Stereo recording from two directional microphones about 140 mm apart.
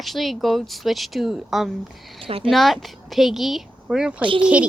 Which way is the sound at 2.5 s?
Centre (ahead or behind).